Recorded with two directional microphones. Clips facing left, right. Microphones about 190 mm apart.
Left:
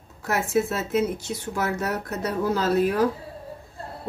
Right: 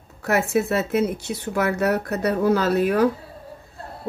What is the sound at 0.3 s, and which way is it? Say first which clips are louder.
Speech: right 3 dB; 65° right (ahead or behind).